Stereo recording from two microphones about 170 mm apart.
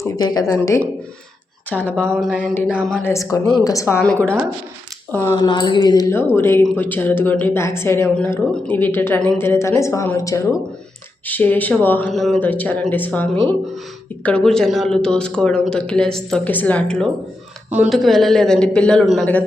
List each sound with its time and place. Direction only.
0.0 s a woman's voice: 25° left (ahead or behind)
5.4 s a woman's voice: 25° left (ahead or behind); by 17.1 s 5° left (ahead or behind)
17.7 s speech: 5° right (ahead or behind)